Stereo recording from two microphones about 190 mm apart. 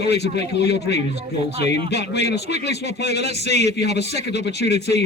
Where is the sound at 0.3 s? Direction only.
60° left (ahead or behind).